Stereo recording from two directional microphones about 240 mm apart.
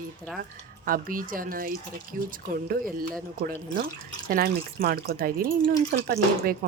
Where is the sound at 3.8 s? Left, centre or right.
Right.